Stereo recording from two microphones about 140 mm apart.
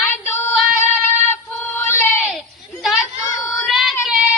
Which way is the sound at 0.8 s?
15° left (ahead or behind).